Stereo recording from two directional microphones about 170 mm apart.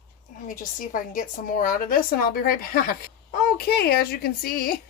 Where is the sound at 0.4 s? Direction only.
55° left (ahead or behind).